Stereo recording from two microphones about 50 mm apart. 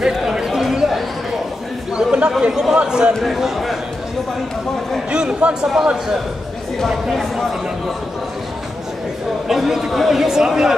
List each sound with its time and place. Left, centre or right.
0.0 s a sound: centre
0.5 s chatter: centre
0.7 s a sound: centre
2.0 s chatter: centre
2.5 s speech: centre
3.2 s a man's voice: centre
5.1 s a man's voice: centre
7.1 s a man's voice: centre
9.5 s speech: centre